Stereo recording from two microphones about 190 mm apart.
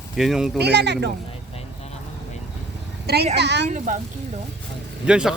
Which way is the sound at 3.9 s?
40° right (ahead or behind).